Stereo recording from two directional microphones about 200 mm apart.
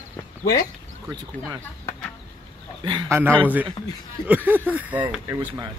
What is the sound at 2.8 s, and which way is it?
Speech, 25° right (ahead or behind).